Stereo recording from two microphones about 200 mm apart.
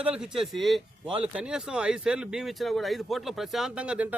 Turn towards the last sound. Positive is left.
turn(degrees=-5)  # may be behind; listen again after turning